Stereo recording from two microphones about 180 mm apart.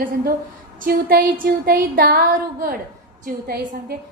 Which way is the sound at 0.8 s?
55° right (ahead or behind).